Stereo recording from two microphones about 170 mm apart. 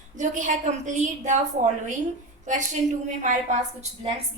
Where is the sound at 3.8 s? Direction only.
35° right (ahead or behind).